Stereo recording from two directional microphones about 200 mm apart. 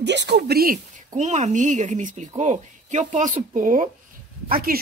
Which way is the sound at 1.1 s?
35° right (ahead or behind).